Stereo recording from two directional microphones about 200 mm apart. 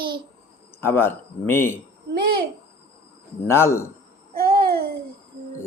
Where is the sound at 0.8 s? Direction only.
10° left (ahead or behind).